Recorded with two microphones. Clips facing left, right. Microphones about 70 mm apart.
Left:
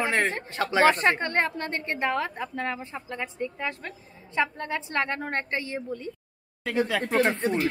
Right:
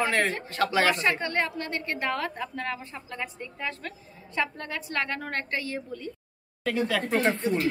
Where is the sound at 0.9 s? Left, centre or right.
Left; by 7.3 s centre.